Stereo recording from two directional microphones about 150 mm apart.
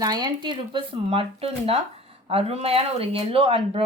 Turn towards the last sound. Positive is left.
turn(degrees=-35)  # may be behind; listen again after turning